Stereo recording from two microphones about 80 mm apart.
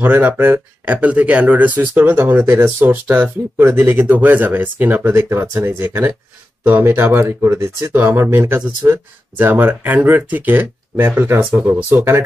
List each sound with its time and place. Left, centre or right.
0.0 s speech: right